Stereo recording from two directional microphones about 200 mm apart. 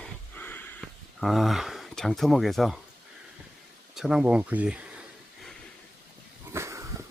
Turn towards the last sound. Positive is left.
turn(degrees=-15)  # may be behind; listen again after turning